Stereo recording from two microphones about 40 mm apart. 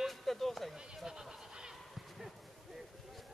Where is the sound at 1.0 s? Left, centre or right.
Centre.